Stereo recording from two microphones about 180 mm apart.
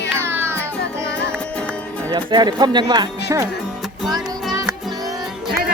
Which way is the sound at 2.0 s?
25° right (ahead or behind).